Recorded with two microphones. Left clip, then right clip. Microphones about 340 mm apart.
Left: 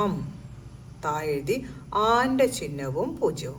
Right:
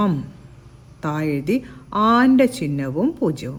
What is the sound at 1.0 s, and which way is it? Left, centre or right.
A woman's voice, right.